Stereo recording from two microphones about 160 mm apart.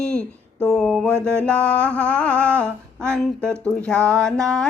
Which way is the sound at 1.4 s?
5° left (ahead or behind).